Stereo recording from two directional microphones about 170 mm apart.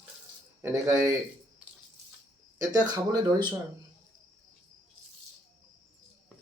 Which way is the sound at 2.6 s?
20° right (ahead or behind).